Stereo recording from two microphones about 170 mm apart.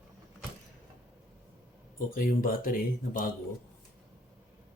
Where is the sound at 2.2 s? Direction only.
55° left (ahead or behind).